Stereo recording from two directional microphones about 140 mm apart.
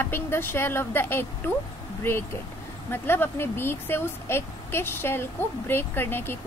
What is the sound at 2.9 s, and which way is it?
Speech, 15° left (ahead or behind).